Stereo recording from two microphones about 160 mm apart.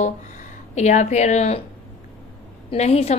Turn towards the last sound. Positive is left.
turn(degrees=40)  # may be behind; listen again after turning